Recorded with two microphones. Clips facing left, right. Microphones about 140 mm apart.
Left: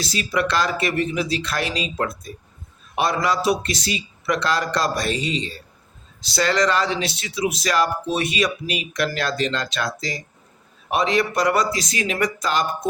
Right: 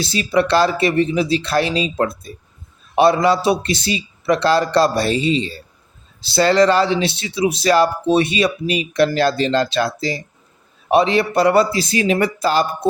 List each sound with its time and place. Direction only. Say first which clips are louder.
0.0 s speech: right 6 dB; 25° right (ahead or behind)